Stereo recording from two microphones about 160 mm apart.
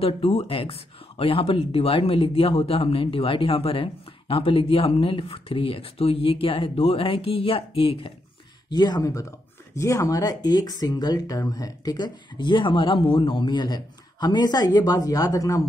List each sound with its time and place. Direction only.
0.0 s speech: 40° left (ahead or behind); by 15.6 s 20° left (ahead or behind)